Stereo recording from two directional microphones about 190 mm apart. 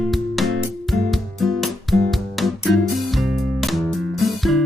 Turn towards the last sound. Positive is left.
turn(degrees=0)  # may be behind; listen again after turning